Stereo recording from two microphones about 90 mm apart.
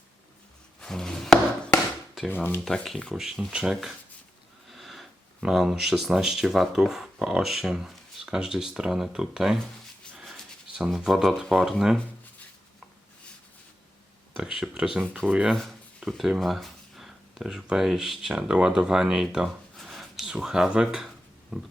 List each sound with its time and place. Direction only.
0.8 s a sound: 5° left (ahead or behind)
2.3 s speech: 20° left (ahead or behind)
2.6 s speech: 5° left (ahead or behind)
10.8 s speech: 5° right (ahead or behind)
14.3 s speech: 5° right (ahead or behind)
15.0 s speech: 10° left (ahead or behind)
15.3 s speech: 10° right (ahead or behind)
15.5 s speech: 5° left (ahead or behind)
19.7 s writing: centre (ahead or behind)